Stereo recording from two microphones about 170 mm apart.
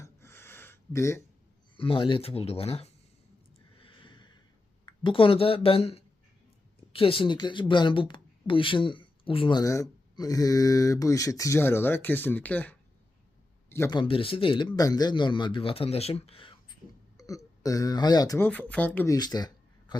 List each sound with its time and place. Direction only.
0.0 s a sound: 15° left (ahead or behind)
1.7 s speech: 30° left (ahead or behind)
3.8 s a sound: 30° left (ahead or behind)
4.9 s speech: 30° left (ahead or behind); by 12.7 s 10° left (ahead or behind)
13.7 s a sound: 15° left (ahead or behind)
13.9 s speech: 30° left (ahead or behind)
17.2 s speech: 20° left (ahead or behind)
18.4 s speech: 10° left (ahead or behind)
19.0 s speech: 25° left (ahead or behind)